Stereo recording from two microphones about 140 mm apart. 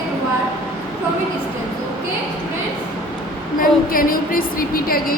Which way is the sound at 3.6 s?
90° left.